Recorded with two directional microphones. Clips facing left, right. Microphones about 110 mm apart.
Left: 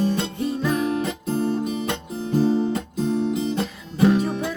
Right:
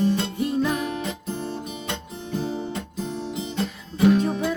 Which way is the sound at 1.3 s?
40° left (ahead or behind).